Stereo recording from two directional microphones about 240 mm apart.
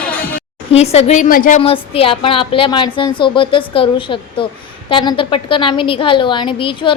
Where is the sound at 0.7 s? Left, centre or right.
Left.